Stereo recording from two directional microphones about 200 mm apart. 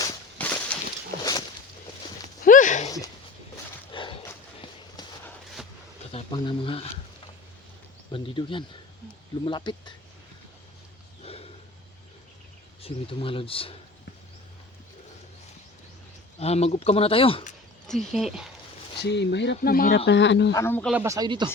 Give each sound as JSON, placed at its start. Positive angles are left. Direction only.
{"t": 0.3, "sound": "a sound", "side_deg": 10}
{"t": 2.4, "sound": "a sound", "side_deg": 40}
{"t": 3.9, "sound": "a sound", "side_deg": 25}
{"t": 6.1, "sound": "speech", "side_deg": 25}
{"t": 8.1, "sound": "speech", "side_deg": 25}
{"t": 11.2, "sound": "a sound", "side_deg": 30}
{"t": 12.8, "sound": "speech", "side_deg": 25}
{"t": 16.4, "sound": "speech", "side_deg": 30}
{"t": 17.8, "sound": "speech", "side_deg": 0}
{"t": 19.0, "sound": "speech", "side_deg": 60}
{"t": 20.1, "sound": "speech", "side_deg": 65}
{"t": 20.5, "sound": "speech", "side_deg": 15}
{"t": 20.9, "sound": "speech", "side_deg": -15}